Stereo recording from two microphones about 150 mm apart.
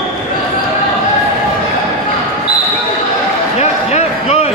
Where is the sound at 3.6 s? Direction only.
45° left (ahead or behind).